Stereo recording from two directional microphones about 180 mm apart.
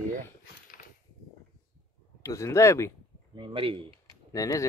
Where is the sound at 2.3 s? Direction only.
15° left (ahead or behind).